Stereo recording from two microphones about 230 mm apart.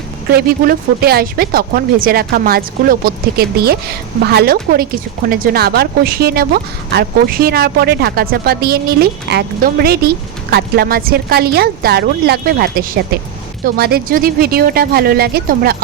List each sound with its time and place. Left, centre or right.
0.3 s speech: right